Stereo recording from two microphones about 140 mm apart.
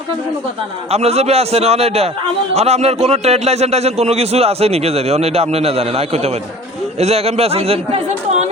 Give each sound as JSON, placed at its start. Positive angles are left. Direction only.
{"t": 0.9, "sound": "a man's voice", "side_deg": -50}